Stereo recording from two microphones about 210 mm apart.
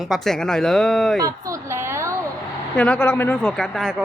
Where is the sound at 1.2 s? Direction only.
15° right (ahead or behind).